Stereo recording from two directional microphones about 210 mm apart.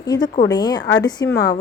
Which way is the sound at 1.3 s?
50° left (ahead or behind).